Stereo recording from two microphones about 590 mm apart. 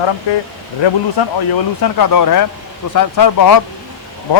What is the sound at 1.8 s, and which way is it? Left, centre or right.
Speech, left.